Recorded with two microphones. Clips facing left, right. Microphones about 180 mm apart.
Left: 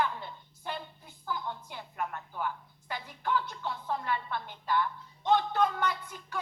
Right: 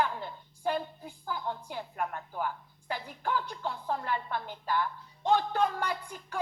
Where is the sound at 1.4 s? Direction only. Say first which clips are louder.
Right 4 dB; 45° right (ahead or behind).